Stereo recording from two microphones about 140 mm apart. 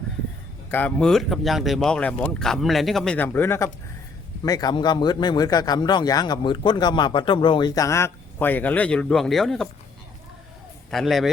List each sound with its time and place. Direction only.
0.7 s speech: 10° left (ahead or behind)
3.2 s speech: 15° left (ahead or behind)
4.4 s speech: 30° left (ahead or behind)
7.8 s speech: 20° left (ahead or behind); by 9.6 s centre (ahead or behind)
10.9 s speech: centre (ahead or behind)